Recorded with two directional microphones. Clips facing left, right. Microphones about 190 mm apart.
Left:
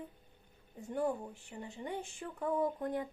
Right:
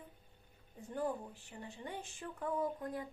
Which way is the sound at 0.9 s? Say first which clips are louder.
Left 4 dB; 15° left (ahead or behind).